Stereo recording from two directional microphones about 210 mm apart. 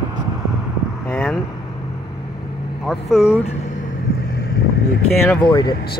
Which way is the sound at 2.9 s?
Centre (ahead or behind).